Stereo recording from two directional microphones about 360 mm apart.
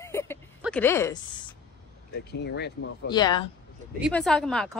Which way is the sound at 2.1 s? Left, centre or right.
Left.